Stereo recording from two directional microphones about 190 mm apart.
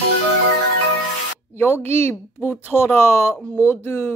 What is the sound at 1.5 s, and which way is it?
Speech, 10° left (ahead or behind).